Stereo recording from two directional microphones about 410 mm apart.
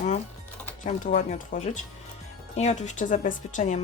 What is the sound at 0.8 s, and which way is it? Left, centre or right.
Speech, centre.